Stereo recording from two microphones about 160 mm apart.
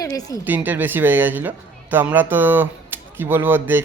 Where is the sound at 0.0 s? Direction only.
20° left (ahead or behind).